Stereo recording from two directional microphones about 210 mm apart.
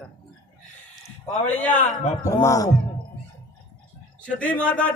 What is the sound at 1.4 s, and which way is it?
Speech, 5° left (ahead or behind).